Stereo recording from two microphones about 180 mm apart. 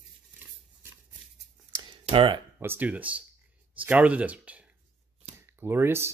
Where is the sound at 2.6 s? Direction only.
10° right (ahead or behind).